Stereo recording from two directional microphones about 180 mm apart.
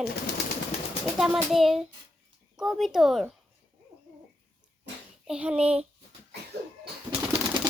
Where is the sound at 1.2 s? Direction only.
Centre (ahead or behind).